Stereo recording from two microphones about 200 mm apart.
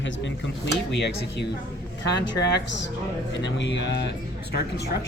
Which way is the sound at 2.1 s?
60° left (ahead or behind).